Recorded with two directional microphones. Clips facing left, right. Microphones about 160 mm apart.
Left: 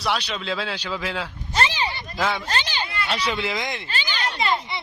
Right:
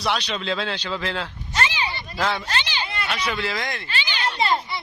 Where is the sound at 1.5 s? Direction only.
40° left (ahead or behind).